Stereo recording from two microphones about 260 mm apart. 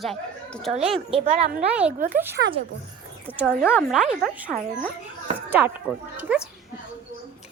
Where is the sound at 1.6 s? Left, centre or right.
Centre.